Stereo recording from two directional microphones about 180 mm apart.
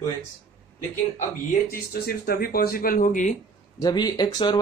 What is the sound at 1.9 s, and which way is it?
Speech, 55° left (ahead or behind).